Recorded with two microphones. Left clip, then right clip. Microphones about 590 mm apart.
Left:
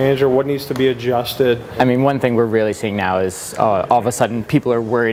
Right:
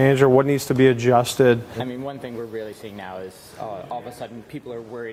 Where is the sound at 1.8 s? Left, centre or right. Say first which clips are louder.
Left 16 dB; left.